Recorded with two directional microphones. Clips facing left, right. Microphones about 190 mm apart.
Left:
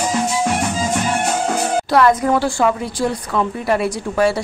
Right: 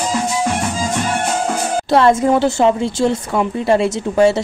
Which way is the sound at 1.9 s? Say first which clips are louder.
Right 3 dB; 25° right (ahead or behind).